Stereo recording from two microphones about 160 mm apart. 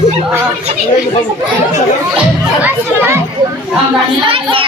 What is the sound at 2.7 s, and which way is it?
Speech, 15° right (ahead or behind).